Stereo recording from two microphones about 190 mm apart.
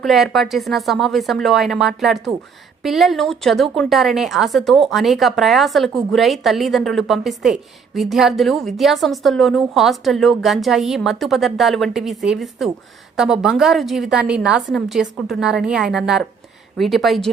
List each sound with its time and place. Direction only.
0.0 s a woman's voice: centre (ahead or behind)